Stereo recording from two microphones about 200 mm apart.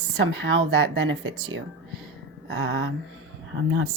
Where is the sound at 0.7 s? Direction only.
60° right (ahead or behind).